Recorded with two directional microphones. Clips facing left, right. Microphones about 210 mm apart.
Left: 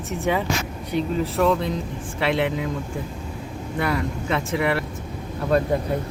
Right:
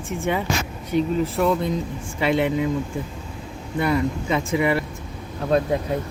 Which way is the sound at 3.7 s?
Centre (ahead or behind).